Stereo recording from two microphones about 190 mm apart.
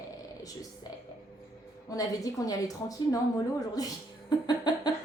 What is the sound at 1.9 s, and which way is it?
A woman's voice, 20° left (ahead or behind).